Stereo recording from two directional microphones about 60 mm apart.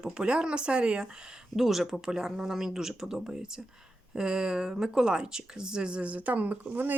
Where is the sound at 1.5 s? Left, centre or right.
Centre.